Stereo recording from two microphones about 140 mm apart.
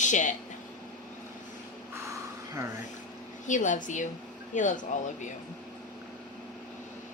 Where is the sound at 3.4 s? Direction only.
65° left (ahead or behind).